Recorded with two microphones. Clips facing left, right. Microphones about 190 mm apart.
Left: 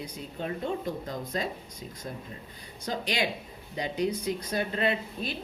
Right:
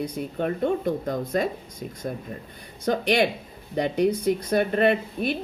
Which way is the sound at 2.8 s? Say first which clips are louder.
Right 9 dB; 60° right (ahead or behind).